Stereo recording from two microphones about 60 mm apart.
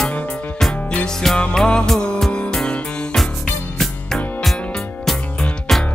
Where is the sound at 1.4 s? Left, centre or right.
Centre.